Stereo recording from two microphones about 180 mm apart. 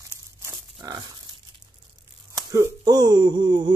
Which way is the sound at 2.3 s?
20° right (ahead or behind).